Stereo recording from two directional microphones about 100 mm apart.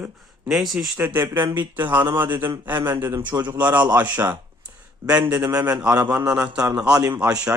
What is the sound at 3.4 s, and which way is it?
Speech, 15° right (ahead or behind).